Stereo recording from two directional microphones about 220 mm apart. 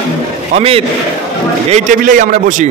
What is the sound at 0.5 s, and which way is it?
A man's voice, 25° right (ahead or behind).